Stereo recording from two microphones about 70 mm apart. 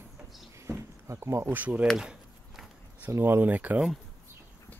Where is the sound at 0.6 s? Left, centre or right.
Right.